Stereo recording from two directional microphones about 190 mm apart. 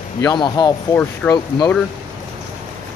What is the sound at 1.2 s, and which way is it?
Speech, 10° left (ahead or behind).